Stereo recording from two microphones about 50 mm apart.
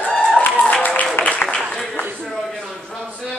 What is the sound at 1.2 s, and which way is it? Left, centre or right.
Applause, left.